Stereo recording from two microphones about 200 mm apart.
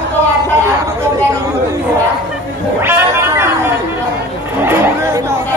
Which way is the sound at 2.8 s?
10° right (ahead or behind).